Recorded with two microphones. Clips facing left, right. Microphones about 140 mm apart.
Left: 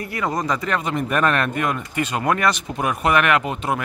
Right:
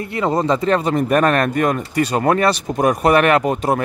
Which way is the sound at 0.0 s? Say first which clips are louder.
Right 5 dB; 25° right (ahead or behind).